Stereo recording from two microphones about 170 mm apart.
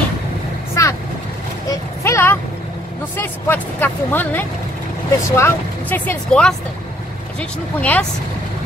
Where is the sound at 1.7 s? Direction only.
15° left (ahead or behind).